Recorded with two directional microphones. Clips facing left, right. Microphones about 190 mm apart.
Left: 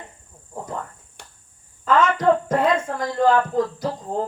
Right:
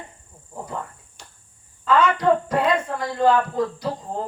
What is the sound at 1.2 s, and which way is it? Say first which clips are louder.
Cricket: left 2 dB; 60° left (ahead or behind).